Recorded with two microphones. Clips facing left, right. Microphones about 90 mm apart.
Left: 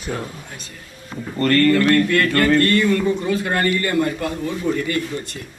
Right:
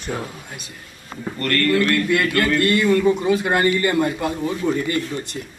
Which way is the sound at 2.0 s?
15° right (ahead or behind).